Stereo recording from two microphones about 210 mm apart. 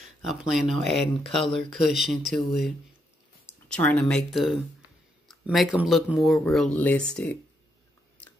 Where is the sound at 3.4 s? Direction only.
5° left (ahead or behind).